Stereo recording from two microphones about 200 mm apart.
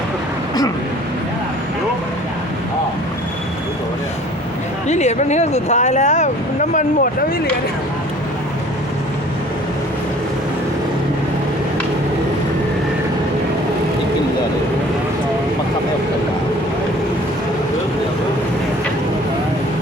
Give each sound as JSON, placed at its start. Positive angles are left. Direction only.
{"t": 4.9, "sound": "speech", "side_deg": 35}